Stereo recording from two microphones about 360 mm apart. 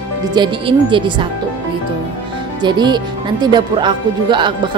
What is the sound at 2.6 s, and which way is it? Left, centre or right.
Speech, centre.